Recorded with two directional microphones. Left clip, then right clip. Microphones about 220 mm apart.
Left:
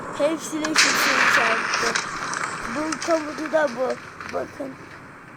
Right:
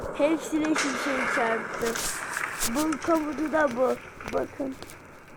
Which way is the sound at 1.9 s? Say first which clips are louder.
Left 6 dB; 35° left (ahead or behind).